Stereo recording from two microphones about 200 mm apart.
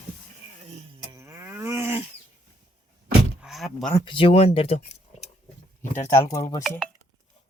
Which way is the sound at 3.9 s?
25° left (ahead or behind).